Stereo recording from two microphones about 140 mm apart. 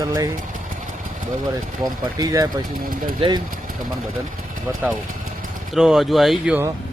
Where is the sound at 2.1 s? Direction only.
25° right (ahead or behind).